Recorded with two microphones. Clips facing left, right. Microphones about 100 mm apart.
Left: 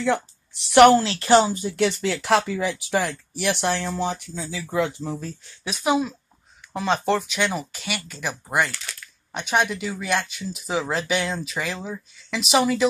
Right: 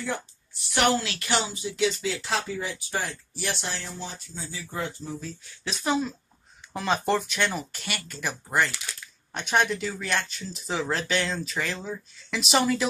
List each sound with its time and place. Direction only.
0.0 s a woman's voice: 85° left; by 0.9 s 65° left (ahead or behind)
1.0 s speech: 30° left (ahead or behind); by 5.1 s 90° left
5.6 s speech: 10° left (ahead or behind)
6.7 s speech: centre (ahead or behind)